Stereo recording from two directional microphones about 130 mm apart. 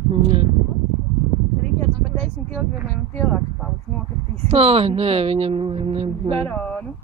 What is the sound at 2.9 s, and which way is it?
Speech, 10° left (ahead or behind).